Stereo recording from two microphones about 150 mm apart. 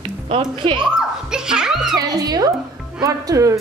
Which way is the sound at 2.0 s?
25° right (ahead or behind).